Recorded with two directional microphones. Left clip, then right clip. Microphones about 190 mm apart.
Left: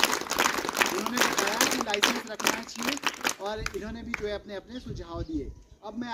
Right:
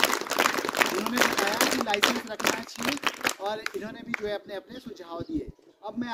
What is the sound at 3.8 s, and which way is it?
Speech, 15° right (ahead or behind).